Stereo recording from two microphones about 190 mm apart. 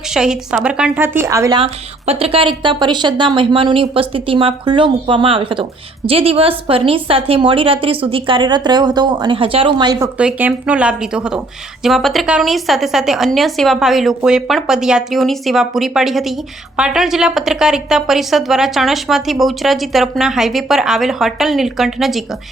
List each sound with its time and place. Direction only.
0.1 s a woman's voice: 5° right (ahead or behind)
1.5 s a woman's voice: 30° right (ahead or behind)
10.2 s speech: 5° right (ahead or behind)